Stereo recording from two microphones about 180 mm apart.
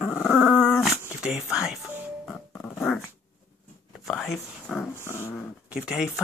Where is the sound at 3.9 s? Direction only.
Centre (ahead or behind).